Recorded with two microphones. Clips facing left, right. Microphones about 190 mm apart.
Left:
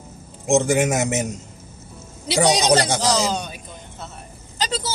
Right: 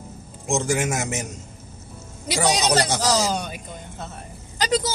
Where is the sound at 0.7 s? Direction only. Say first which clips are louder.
Left 5 dB; 20° left (ahead or behind).